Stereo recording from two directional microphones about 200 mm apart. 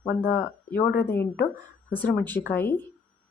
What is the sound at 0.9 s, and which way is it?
Speech, 10° left (ahead or behind).